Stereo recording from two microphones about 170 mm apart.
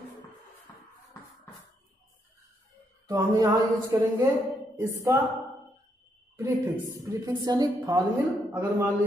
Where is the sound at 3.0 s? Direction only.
20° right (ahead or behind).